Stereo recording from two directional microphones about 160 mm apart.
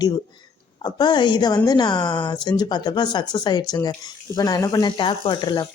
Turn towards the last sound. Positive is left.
turn(degrees=30)  # may be behind; listen again after turning